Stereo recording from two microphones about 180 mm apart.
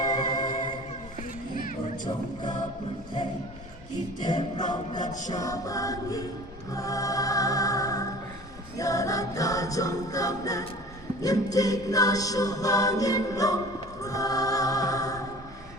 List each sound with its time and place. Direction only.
0.0 s music: 25° left (ahead or behind)
2.0 s music: 25° left (ahead or behind)
4.2 s a capella: 25° left (ahead or behind)
4.9 s music: 45° left (ahead or behind)
5.3 s a capella: 20° left (ahead or behind)
6.7 s music: 20° left (ahead or behind)
8.8 s a capella: 20° left (ahead or behind)
14.0 s choir: 20° left (ahead or behind)